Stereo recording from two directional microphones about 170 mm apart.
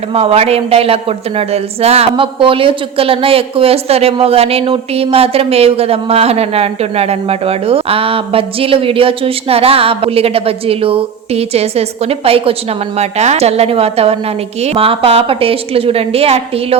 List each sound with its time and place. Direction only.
0.1 s a woman's voice: 35° right (ahead or behind)